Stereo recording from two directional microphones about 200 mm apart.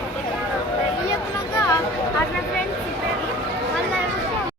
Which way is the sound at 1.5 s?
15° left (ahead or behind).